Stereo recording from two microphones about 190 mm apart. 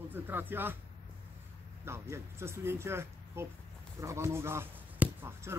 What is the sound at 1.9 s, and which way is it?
Speech, 15° right (ahead or behind).